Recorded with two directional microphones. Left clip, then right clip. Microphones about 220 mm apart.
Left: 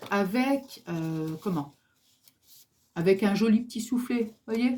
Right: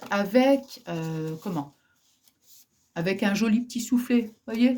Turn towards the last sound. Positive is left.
turn(degrees=-45)  # may be behind; listen again after turning